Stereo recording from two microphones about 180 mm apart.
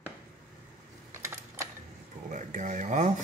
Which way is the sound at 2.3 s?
45° right (ahead or behind).